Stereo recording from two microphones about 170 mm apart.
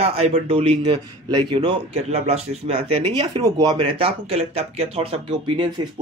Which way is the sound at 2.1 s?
35° right (ahead or behind).